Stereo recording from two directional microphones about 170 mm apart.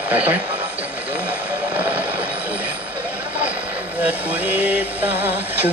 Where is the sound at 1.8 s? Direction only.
10° right (ahead or behind).